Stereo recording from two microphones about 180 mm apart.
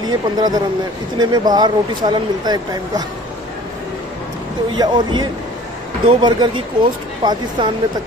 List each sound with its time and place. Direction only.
0.0 s speech: 20° right (ahead or behind)
4.7 s speech: 25° right (ahead or behind)